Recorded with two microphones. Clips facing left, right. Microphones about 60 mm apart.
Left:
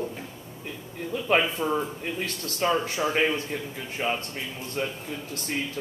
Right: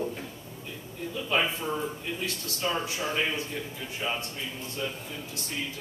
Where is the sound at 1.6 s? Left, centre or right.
Left.